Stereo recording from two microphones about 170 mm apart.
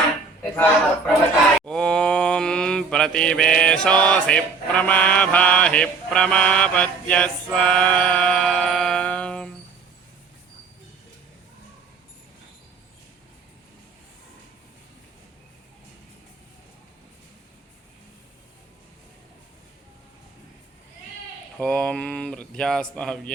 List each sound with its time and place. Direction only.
0.5 s speech: 10° left (ahead or behind)
1.6 s mantra: 5° left (ahead or behind)
21.6 s mantra: 5° left (ahead or behind)